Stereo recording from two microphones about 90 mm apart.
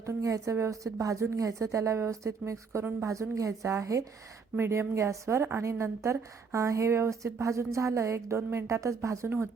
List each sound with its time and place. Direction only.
0.0 s a woman's voice: 35° right (ahead or behind)